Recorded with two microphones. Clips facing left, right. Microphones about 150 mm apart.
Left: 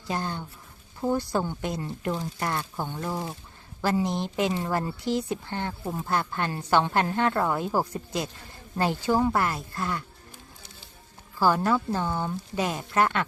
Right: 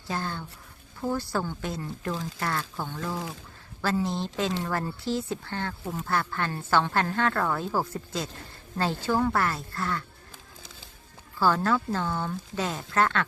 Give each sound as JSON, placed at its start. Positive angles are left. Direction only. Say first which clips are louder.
{"t": 0.1, "sound": "a woman's voice", "louder": "left 2 dB", "side_deg": 15}
{"t": 11.3, "sound": "a woman's voice", "louder": "left 1 dB", "side_deg": 15}